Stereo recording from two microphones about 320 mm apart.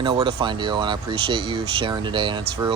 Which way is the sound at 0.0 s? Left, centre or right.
Centre.